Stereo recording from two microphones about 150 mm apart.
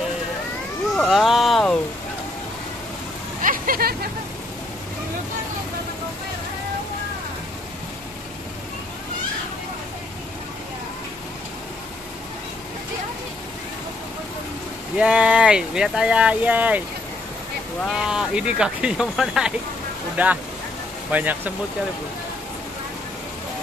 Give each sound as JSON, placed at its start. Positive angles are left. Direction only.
{"t": 0.9, "sound": "a sound", "side_deg": 0}
{"t": 3.4, "sound": "vehicle", "side_deg": -70}
{"t": 15.0, "sound": "speech", "side_deg": -5}
{"t": 17.8, "sound": "speech", "side_deg": -5}